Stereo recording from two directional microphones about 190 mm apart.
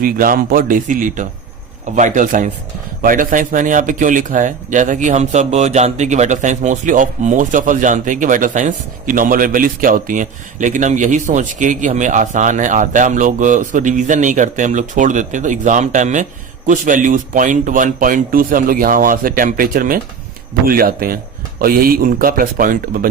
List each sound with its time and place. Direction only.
0.0 s speech: 50° right (ahead or behind)